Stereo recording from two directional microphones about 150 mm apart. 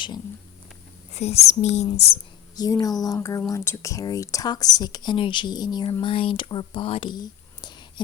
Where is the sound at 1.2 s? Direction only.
45° left (ahead or behind).